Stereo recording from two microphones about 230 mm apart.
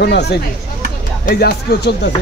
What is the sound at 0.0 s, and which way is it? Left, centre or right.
A man's voice, left.